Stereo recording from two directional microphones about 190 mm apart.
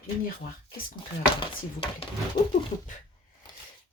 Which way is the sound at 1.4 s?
30° left (ahead or behind).